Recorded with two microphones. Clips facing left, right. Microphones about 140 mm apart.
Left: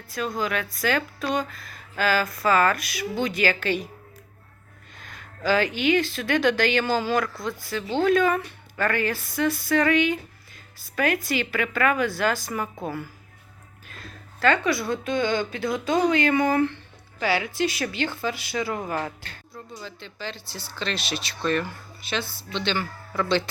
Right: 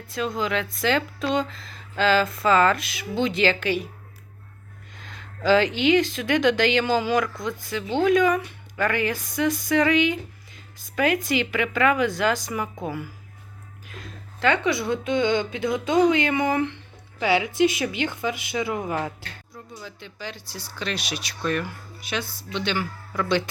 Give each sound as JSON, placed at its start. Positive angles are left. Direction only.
{"t": 0.1, "sound": "speech", "side_deg": -20}
{"t": 4.9, "sound": "a sound", "side_deg": -20}
{"t": 5.5, "sound": "a woman's voice", "side_deg": -20}